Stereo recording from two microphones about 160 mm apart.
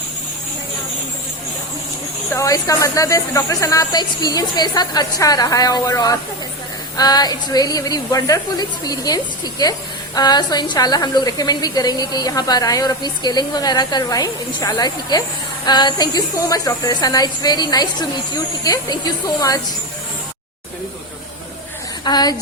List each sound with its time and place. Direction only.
2.3 s a woman's voice: 20° left (ahead or behind)
22.0 s a woman's voice: 25° left (ahead or behind)